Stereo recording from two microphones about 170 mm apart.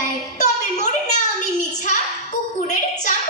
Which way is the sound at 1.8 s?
45° left (ahead or behind).